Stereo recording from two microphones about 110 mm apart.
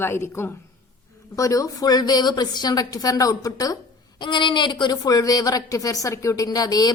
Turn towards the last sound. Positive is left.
turn(degrees=35)  # may be behind; listen again after turning